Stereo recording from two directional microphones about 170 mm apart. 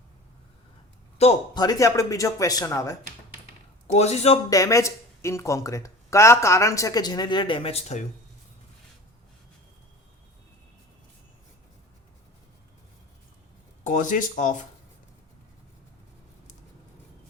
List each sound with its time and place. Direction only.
1.2 s a man's voice: 35° left (ahead or behind)
1.5 s speech: 20° left (ahead or behind)
3.9 s a man's voice: 40° left (ahead or behind)
4.4 s speech: 20° left (ahead or behind); by 8.0 s 40° left (ahead or behind)
13.8 s speech: 50° left (ahead or behind)